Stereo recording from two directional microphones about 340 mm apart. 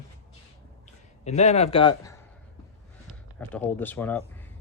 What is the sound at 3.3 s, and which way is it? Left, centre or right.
Speech, centre.